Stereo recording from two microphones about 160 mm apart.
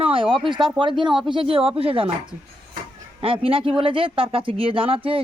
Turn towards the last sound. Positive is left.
turn(degrees=-35)  # may be behind; listen again after turning